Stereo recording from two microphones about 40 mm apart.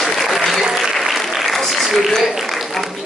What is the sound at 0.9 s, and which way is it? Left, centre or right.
Applause, centre.